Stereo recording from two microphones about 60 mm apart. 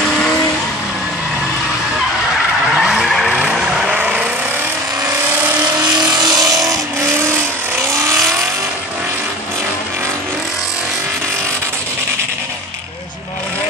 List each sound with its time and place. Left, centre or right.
2.7 s skidding: centre
3.3 s vehicle: centre
4.0 s vehicle: right
6.3 s vehicle: right
7.0 s vehicle: right